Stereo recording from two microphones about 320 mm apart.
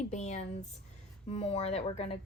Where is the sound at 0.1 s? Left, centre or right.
Left.